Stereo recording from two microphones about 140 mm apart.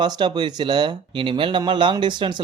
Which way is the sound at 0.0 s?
30° right (ahead or behind).